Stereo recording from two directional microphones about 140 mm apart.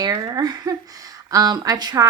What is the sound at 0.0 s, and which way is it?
Speech, 25° right (ahead or behind).